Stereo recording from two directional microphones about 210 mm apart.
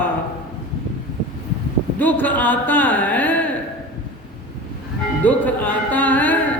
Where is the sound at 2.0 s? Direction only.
10° left (ahead or behind).